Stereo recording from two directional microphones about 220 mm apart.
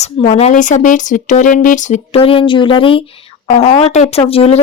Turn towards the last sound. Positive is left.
turn(degrees=25)  # may be behind; listen again after turning